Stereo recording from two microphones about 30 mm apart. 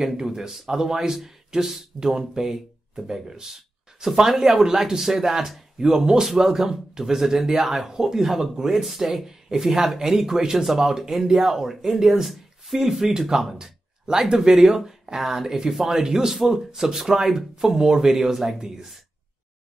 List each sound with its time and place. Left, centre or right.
0.0 s speech: centre
4.6 s speech: centre
7.9 s speech: centre
8.8 s speech: centre
13.6 s a sound: right
14.3 s speech: right
14.6 s speech: centre